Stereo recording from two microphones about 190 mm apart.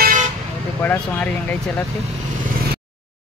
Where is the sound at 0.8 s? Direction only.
10° left (ahead or behind).